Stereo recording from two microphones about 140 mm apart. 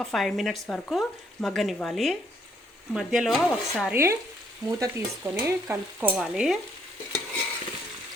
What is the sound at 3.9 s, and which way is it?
Stir, 15° right (ahead or behind).